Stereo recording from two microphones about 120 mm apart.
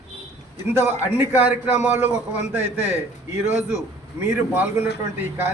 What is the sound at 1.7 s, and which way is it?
Speech, 75° left (ahead or behind).